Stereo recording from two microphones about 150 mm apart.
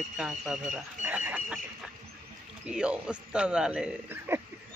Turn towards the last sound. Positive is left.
turn(degrees=-10)  # may be behind; listen again after turning